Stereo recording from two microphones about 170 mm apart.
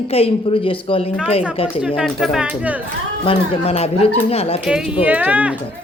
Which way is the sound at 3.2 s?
30° left (ahead or behind).